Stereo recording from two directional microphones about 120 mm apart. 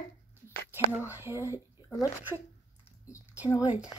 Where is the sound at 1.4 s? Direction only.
30° left (ahead or behind).